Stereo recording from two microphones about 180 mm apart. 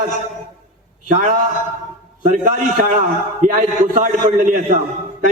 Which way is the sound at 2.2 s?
45° right (ahead or behind).